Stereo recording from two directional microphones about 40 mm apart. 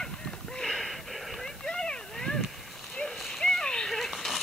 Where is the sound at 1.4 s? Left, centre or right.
Centre.